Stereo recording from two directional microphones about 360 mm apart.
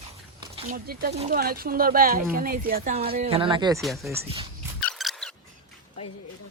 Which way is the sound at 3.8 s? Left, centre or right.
Centre.